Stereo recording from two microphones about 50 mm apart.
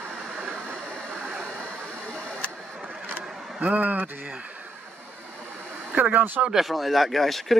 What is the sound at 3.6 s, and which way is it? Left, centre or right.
Speech, right.